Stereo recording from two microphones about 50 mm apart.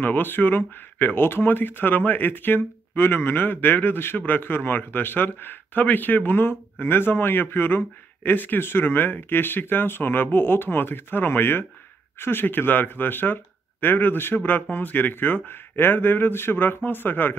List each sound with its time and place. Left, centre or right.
0.0 s speech: left